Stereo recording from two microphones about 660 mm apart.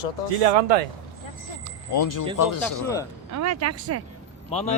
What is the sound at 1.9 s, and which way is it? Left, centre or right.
Speech, left.